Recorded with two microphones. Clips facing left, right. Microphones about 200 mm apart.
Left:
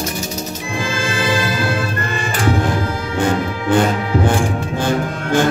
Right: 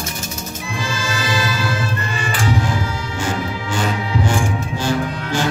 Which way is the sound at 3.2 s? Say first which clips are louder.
Left 6 dB; 55° left (ahead or behind).